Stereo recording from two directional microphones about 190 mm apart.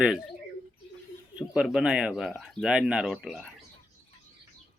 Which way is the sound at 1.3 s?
5° right (ahead or behind).